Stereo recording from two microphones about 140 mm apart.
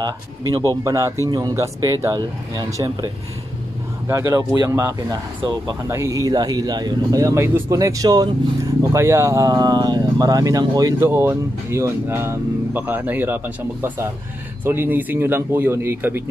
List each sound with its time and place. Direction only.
0.0 s speech: 25° right (ahead or behind)
4.1 s speech: 20° right (ahead or behind)